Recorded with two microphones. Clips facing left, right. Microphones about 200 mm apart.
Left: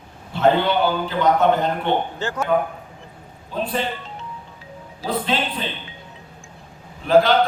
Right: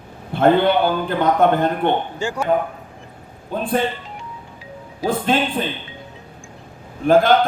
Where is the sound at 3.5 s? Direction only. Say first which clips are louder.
Right 4 dB; 50° right (ahead or behind).